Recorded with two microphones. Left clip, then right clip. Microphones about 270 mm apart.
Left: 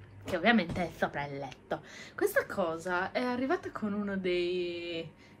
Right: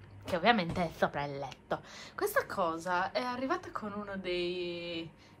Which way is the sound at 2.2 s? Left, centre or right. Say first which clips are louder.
Left 2 dB; centre.